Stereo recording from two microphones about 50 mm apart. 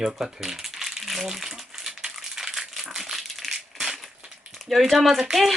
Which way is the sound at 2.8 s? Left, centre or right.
Centre.